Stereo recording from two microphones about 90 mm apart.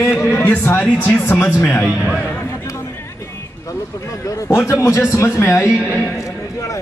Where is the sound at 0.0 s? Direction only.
30° left (ahead or behind).